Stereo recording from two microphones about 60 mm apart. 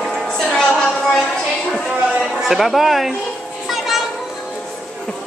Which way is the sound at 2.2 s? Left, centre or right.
Centre.